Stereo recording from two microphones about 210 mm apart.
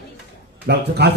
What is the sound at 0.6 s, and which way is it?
Speech, 50° right (ahead or behind).